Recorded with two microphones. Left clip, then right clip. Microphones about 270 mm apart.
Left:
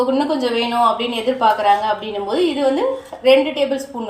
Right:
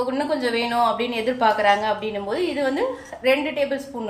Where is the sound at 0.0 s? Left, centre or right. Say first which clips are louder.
Left 5 dB; right.